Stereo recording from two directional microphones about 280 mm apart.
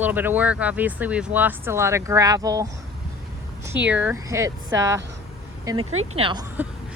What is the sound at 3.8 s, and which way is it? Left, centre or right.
Speech, centre.